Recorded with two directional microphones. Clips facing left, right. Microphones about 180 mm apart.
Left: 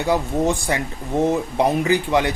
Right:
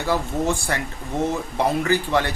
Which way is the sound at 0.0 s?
20° left (ahead or behind).